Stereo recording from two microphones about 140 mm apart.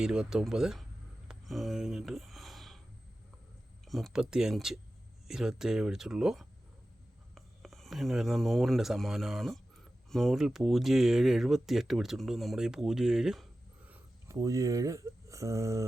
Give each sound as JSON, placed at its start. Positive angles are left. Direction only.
{"t": 0.0, "sound": "speech", "side_deg": -5}
{"t": 1.3, "sound": "a sound", "side_deg": 0}
{"t": 3.8, "sound": "speech", "side_deg": 0}
{"t": 14.3, "sound": "speech", "side_deg": -25}